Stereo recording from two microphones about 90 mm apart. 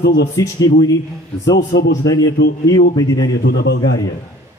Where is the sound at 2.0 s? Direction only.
45° left (ahead or behind).